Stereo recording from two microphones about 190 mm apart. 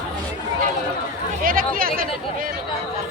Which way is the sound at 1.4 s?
50° right (ahead or behind).